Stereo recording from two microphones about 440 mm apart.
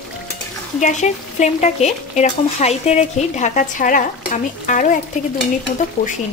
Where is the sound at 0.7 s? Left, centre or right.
Centre.